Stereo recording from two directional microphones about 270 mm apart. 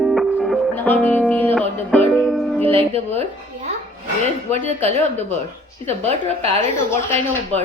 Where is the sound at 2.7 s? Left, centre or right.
Right.